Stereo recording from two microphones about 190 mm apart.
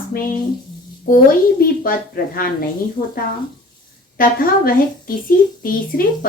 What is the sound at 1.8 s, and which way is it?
Speech, 50° left (ahead or behind).